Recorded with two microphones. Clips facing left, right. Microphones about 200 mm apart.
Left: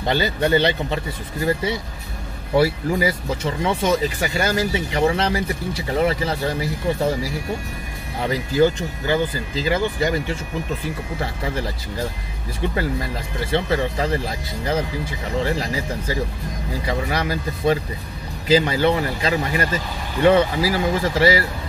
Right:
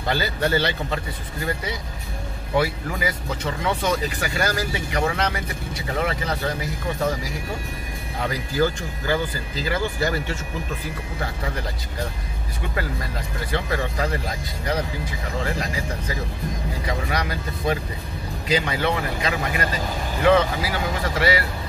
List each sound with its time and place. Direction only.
0.1 s speech: 20° left (ahead or behind)
8.2 s speech: 25° left (ahead or behind)
13.4 s speech: 25° left (ahead or behind)